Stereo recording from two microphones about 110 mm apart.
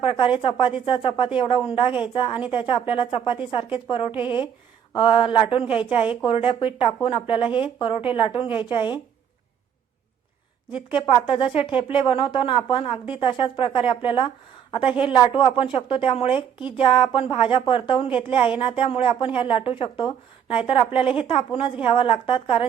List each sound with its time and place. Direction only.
0.0 s a woman's voice: 55° left (ahead or behind)
10.9 s a woman's voice: 50° left (ahead or behind)